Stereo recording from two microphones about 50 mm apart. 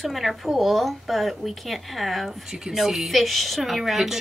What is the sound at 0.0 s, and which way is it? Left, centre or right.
A woman's voice, centre.